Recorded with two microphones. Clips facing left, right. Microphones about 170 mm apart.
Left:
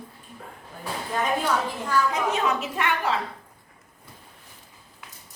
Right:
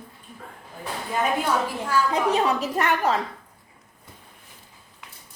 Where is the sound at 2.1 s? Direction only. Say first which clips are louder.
Right 3 dB; 35° right (ahead or behind).